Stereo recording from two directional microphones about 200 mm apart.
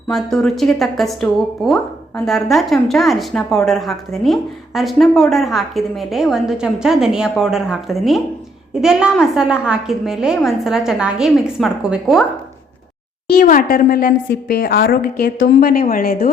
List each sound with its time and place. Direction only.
0.1 s a woman's voice: centre (ahead or behind)
13.4 s a woman's voice: 45° left (ahead or behind)